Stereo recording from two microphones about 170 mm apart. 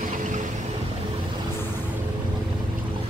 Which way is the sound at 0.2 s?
50° right (ahead or behind).